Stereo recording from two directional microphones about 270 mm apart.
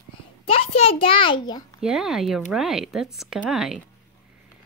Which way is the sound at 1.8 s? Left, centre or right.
Centre.